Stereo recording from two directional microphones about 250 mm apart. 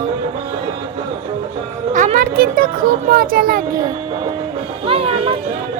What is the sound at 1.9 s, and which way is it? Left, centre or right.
Speech, right.